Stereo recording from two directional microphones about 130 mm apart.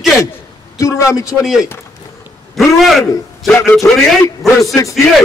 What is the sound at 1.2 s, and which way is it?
A man's voice, 5° right (ahead or behind).